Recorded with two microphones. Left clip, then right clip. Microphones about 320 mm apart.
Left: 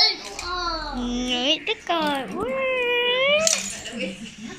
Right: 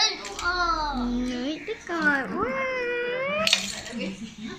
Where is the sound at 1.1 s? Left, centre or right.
Centre.